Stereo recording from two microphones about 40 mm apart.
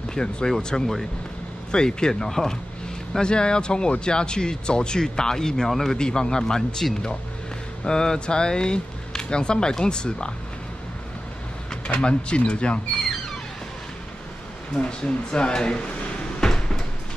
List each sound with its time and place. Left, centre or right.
0.1 s speech: left
5.9 s speech: centre
11.9 s speech: left
14.8 s speech: left
16.3 s cupboard open or close: centre